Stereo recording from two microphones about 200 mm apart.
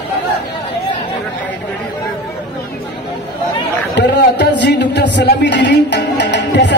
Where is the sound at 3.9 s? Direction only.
60° left (ahead or behind).